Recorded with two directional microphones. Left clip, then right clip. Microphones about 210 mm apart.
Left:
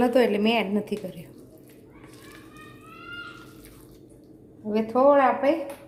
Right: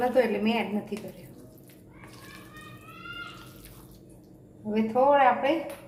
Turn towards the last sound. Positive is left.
turn(degrees=45)  # may be behind; listen again after turning